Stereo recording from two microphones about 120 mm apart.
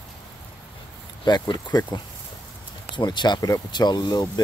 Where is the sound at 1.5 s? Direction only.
35° left (ahead or behind).